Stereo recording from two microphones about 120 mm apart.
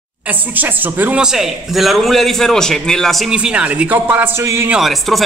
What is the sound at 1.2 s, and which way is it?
A man's voice, 5° right (ahead or behind).